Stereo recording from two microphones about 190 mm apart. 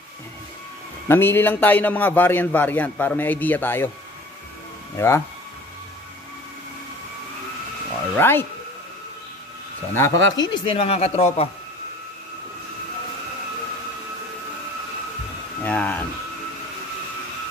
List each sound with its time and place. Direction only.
1.0 s a man's voice: 10° left (ahead or behind)
4.9 s a man's voice: 15° left (ahead or behind)
8.2 s a man's voice: 10° left (ahead or behind)
9.9 s a man's voice: 15° left (ahead or behind); by 11.4 s 35° left (ahead or behind)
15.6 s a man's voice: 10° left (ahead or behind)